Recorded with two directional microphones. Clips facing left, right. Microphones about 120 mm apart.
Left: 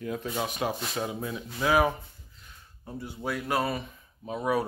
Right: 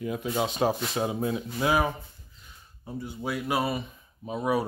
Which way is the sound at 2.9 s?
Centre (ahead or behind).